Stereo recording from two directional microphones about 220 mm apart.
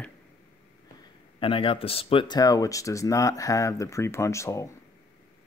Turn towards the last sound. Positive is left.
turn(degrees=15)  # may be behind; listen again after turning